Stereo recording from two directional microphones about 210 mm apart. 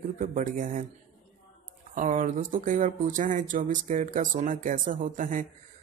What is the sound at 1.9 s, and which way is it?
Speech, 35° right (ahead or behind).